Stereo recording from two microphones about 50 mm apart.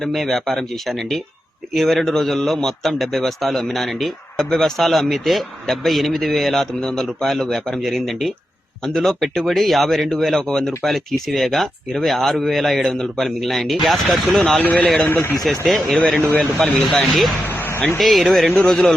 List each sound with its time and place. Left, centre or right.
0.1 s speech: centre
10.4 s speech: centre
10.8 s speech: centre
14.6 s speech: left
15.1 s speech: left
15.4 s speech: centre
15.9 s speech: centre
16.2 s speech: left
16.8 s speech: centre